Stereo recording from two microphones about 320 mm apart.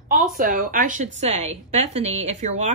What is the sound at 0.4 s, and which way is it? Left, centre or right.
A woman's voice, right.